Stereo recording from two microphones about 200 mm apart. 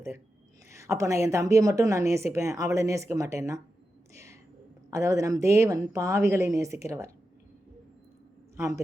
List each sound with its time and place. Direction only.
0.7 s a woman's voice: 15° right (ahead or behind)
4.1 s a sound: 15° right (ahead or behind)
4.9 s a woman's voice: 15° right (ahead or behind)
8.5 s a man's voice: 15° right (ahead or behind)